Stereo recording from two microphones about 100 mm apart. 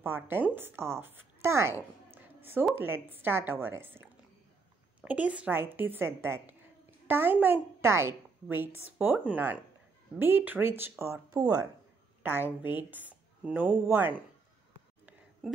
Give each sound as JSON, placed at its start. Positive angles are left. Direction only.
{"t": 0.0, "sound": "a woman's voice", "side_deg": -20}
{"t": 2.0, "sound": "a sound", "side_deg": -20}
{"t": 2.8, "sound": "a woman's voice", "side_deg": -20}
{"t": 12.2, "sound": "a woman's voice", "side_deg": -20}